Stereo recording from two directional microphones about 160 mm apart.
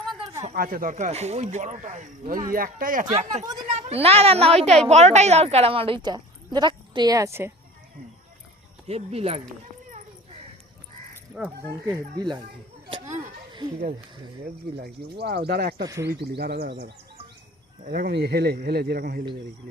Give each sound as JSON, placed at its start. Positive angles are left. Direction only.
{"t": 0.5, "sound": "speech", "side_deg": -65}
{"t": 3.7, "sound": "a child's voice", "side_deg": -40}
{"t": 8.9, "sound": "a woman's voice", "side_deg": -40}
{"t": 11.9, "sound": "speech", "side_deg": -25}
{"t": 13.1, "sound": "a sound", "side_deg": -25}
{"t": 14.7, "sound": "speech", "side_deg": -90}
{"t": 15.9, "sound": "speech", "side_deg": -20}
{"t": 16.1, "sound": "speech", "side_deg": -85}
{"t": 17.8, "sound": "speech", "side_deg": -75}